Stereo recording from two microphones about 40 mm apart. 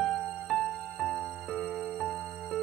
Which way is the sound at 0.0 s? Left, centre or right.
Centre.